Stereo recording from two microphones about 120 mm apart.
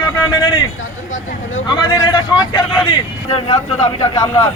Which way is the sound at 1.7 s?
35° left (ahead or behind).